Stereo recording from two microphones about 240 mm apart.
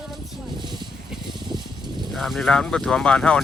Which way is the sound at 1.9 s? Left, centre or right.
Centre.